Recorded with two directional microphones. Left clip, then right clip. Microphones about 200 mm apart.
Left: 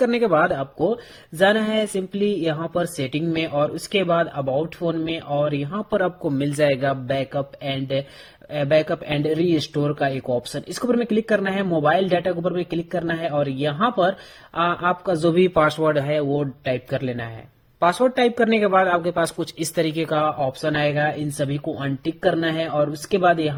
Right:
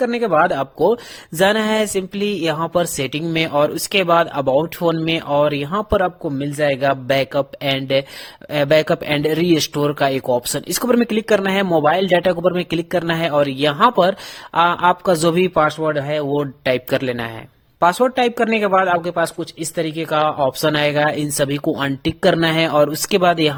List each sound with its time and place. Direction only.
0.0 s speech: 15° right (ahead or behind); by 6.1 s 35° right (ahead or behind)
6.2 s speech: 10° right (ahead or behind)
6.8 s speech: 35° right (ahead or behind); by 16.2 s 15° right (ahead or behind)
16.4 s speech: 40° right (ahead or behind)
17.7 s speech: 25° right (ahead or behind)
20.2 s speech: 40° right (ahead or behind)